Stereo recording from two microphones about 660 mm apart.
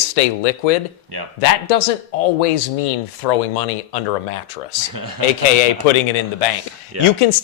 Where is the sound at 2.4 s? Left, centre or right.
Left.